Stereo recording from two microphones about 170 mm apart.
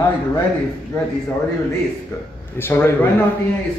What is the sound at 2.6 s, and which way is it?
Speech, 10° left (ahead or behind).